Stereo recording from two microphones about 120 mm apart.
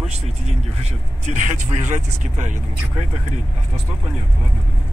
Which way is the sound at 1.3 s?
85° right.